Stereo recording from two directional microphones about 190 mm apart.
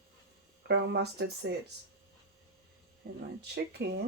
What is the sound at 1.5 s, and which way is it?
Speech, 65° right (ahead or behind).